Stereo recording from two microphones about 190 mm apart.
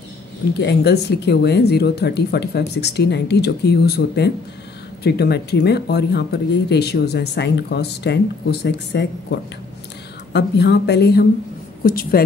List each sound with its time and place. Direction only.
0.6 s a woman's voice: 60° left (ahead or behind)